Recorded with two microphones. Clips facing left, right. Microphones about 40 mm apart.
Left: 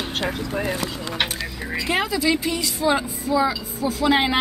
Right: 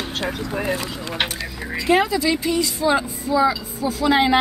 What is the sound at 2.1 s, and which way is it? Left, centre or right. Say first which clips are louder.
Speech: right 1 dB; centre.